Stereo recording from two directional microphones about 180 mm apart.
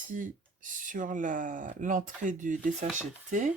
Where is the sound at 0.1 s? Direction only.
45° right (ahead or behind).